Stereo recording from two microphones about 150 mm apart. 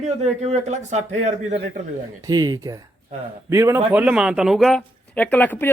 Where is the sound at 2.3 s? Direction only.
25° right (ahead or behind).